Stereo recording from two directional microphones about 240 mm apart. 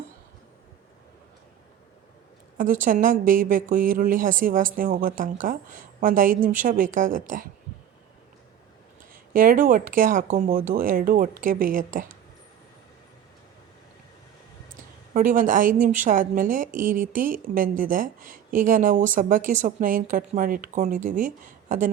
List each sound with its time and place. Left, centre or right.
2.6 s speech: right
9.1 s speech: right
15.1 s speech: right